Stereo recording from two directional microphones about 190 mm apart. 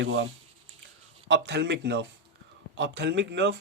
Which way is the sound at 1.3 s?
65° right (ahead or behind).